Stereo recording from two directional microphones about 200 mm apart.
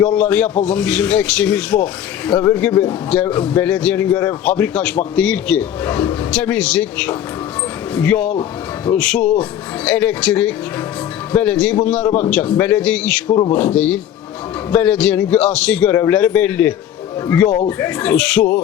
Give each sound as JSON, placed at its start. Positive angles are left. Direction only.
{"t": 0.0, "sound": "speech", "side_deg": 5}
{"t": 13.2, "sound": "speech", "side_deg": 25}
{"t": 13.5, "sound": "speech", "side_deg": 5}